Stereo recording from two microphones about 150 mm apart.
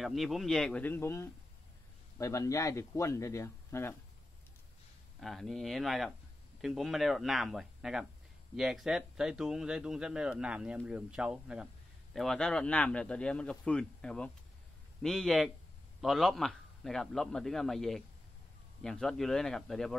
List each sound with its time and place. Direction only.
0.0 s speech: centre (ahead or behind); by 3.9 s 15° left (ahead or behind)
5.2 s speech: centre (ahead or behind)